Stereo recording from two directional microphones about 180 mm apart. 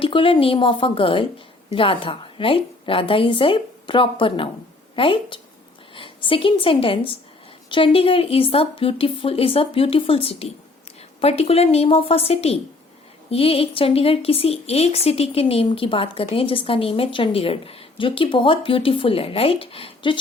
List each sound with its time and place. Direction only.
0.0 s a woman's voice: 30° left (ahead or behind)